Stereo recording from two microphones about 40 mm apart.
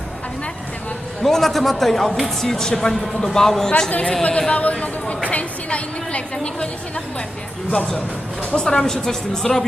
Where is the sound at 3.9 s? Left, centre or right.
Left.